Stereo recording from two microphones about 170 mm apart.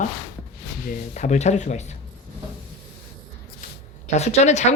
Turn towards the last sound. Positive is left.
turn(degrees=40)  # may be behind; listen again after turning